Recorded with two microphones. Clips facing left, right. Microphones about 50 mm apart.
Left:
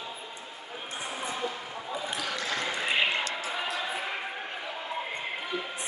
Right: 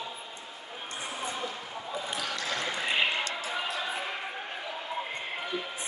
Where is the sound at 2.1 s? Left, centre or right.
Centre.